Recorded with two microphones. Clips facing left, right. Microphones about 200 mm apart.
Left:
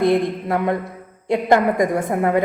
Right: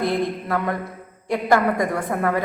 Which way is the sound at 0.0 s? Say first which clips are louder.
Left 5 dB; 25° left (ahead or behind).